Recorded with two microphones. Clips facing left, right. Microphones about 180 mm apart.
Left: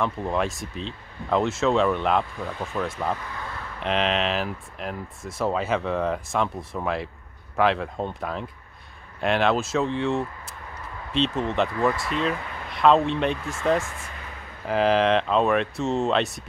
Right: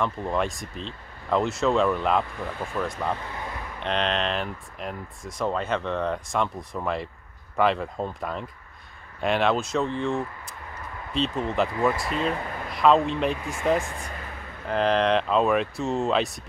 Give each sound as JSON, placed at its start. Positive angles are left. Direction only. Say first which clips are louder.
{"t": 0.0, "sound": "speech", "louder": "left 1 dB", "side_deg": 0}
{"t": 3.3, "sound": "a sound", "louder": "right 1 dB", "side_deg": -20}
{"t": 3.8, "sound": "speech", "louder": "left 2 dB", "side_deg": 5}
{"t": 14.7, "sound": "speech", "louder": "left 2 dB", "side_deg": 5}